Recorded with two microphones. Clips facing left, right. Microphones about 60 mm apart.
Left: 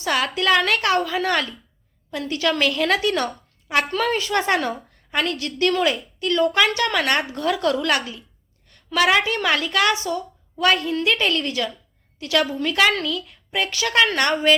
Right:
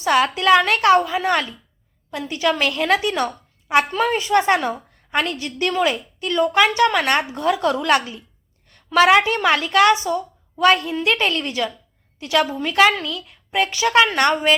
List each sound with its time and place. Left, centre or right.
0.0 s a woman's voice: right